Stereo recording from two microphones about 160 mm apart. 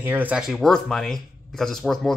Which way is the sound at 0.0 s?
10° right (ahead or behind).